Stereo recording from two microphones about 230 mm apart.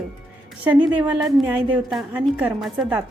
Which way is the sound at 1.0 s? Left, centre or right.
Centre.